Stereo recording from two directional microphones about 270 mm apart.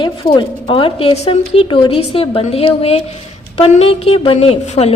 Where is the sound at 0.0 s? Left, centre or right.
Centre.